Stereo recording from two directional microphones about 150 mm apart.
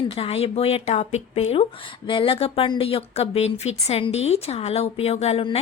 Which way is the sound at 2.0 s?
35° left (ahead or behind).